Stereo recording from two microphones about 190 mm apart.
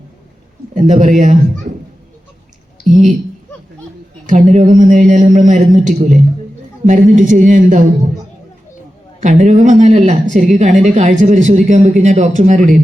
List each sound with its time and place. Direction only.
0.7 s speech: 40° right (ahead or behind)
2.9 s a woman's voice: centre (ahead or behind)
4.3 s speech: 40° right (ahead or behind)
9.2 s speech: 40° right (ahead or behind)